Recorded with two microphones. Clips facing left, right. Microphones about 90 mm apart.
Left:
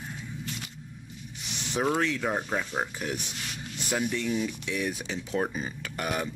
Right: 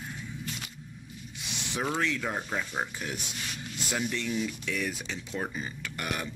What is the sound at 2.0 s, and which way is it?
Speech, 25° left (ahead or behind).